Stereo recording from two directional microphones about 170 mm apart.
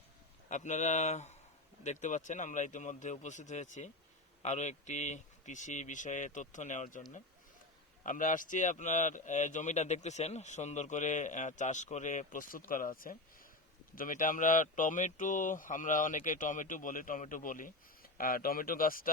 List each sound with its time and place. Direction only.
0.4 s a man's voice: 45° left (ahead or behind)
8.0 s a man's voice: 50° left (ahead or behind)